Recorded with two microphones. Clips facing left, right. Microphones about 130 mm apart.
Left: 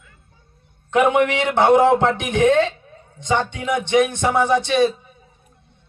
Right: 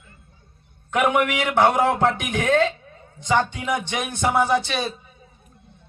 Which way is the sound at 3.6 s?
25° left (ahead or behind).